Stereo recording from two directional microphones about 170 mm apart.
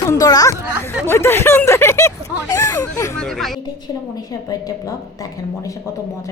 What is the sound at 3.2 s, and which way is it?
Speech, centre (ahead or behind).